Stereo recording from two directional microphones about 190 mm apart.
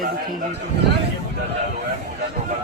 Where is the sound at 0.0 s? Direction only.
45° right (ahead or behind).